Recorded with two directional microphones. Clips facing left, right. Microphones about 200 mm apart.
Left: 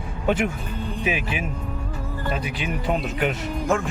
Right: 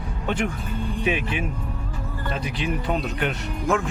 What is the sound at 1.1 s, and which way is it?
Speech, 5° left (ahead or behind).